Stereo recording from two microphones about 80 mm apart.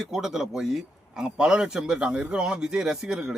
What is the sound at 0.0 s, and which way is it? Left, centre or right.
Speech, centre.